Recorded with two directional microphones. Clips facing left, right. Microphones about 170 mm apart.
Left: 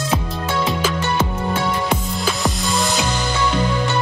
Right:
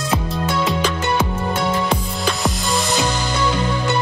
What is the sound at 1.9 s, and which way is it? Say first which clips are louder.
Music: even; centre (ahead or behind).